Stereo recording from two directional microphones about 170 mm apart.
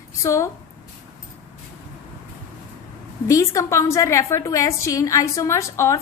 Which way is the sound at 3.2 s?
20° left (ahead or behind).